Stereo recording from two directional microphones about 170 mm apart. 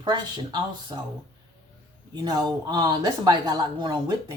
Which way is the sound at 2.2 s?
25° right (ahead or behind).